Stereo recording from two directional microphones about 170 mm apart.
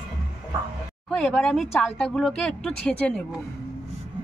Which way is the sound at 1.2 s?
Centre (ahead or behind).